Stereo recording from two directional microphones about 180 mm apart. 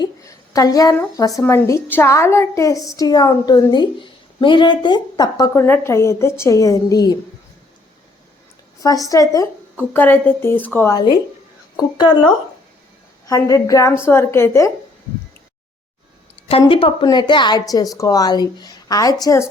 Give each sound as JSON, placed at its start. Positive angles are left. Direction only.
{"t": 0.0, "sound": "a woman's voice", "side_deg": 20}
{"t": 8.8, "sound": "a woman's voice", "side_deg": 20}
{"t": 13.2, "sound": "a woman's voice", "side_deg": 20}
{"t": 16.5, "sound": "a woman's voice", "side_deg": 30}